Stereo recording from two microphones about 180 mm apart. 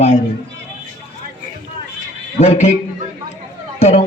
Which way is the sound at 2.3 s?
35° left (ahead or behind).